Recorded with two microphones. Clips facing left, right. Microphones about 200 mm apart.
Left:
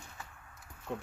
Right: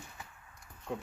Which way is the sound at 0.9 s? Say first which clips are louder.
Right 1 dB; centre (ahead or behind).